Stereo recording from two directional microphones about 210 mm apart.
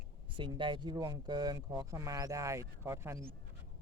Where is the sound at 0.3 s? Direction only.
20° right (ahead or behind).